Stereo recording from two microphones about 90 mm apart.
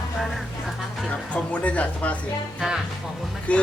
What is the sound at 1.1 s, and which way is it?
Speech, 15° left (ahead or behind).